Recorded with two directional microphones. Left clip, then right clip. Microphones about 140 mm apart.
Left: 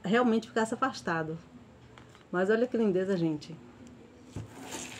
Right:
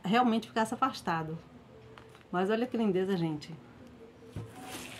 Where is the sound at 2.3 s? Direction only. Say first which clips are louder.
Left 3 dB; 20° right (ahead or behind).